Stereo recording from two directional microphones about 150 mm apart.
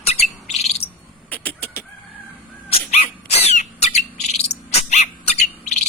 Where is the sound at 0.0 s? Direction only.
45° left (ahead or behind).